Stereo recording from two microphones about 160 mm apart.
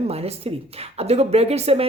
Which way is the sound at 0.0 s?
40° right (ahead or behind).